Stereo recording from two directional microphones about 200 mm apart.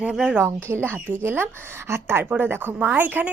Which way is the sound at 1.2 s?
10° right (ahead or behind).